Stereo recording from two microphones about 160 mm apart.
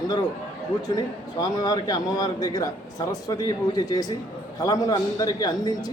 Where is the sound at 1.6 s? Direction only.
25° left (ahead or behind).